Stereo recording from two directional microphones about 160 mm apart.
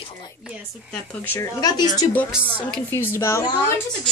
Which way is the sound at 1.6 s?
25° left (ahead or behind).